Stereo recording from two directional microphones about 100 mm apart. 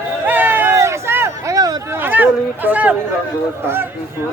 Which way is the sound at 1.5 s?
40° right (ahead or behind).